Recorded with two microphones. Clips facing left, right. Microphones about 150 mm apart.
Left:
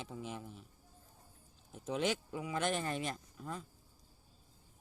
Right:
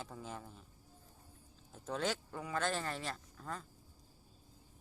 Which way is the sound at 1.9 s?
10° left (ahead or behind).